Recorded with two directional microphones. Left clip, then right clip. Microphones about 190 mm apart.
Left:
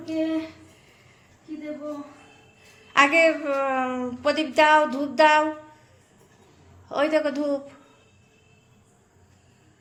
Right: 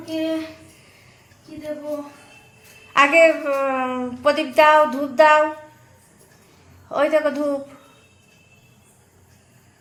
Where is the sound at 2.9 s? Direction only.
10° left (ahead or behind).